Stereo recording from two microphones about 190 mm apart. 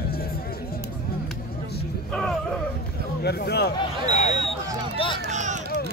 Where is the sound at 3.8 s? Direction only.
35° left (ahead or behind).